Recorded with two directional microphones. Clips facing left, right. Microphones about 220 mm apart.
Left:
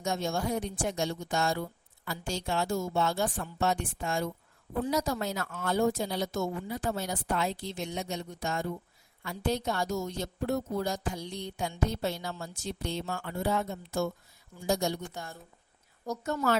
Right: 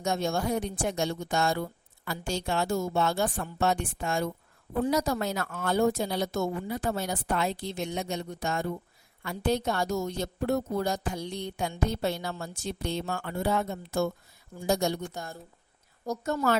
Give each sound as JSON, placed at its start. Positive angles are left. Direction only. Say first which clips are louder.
{"t": 0.0, "sound": "speech", "louder": "right 3 dB", "side_deg": -65}
{"t": 16.0, "sound": "a woman's voice", "louder": "right 2 dB", "side_deg": -40}